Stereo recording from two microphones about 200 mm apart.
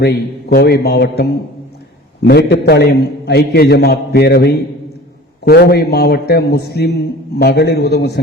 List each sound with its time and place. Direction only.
0.5 s a man's voice: 55° left (ahead or behind)